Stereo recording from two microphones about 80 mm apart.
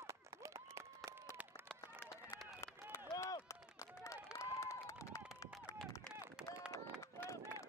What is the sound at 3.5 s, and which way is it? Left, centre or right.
Run, left.